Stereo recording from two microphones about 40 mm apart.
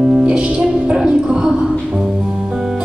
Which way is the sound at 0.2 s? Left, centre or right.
Right.